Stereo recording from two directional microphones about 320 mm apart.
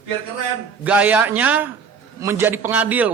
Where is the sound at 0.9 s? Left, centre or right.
Centre.